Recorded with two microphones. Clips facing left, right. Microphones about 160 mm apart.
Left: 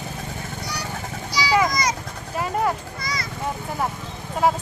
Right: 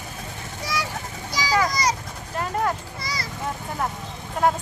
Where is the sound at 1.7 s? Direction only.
30° right (ahead or behind).